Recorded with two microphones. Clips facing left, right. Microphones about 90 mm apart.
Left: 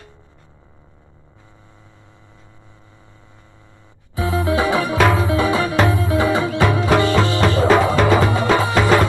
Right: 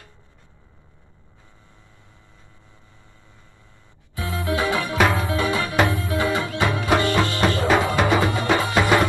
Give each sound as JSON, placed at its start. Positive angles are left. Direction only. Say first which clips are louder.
{"t": 4.1, "sound": "music", "louder": "left 6 dB", "side_deg": 20}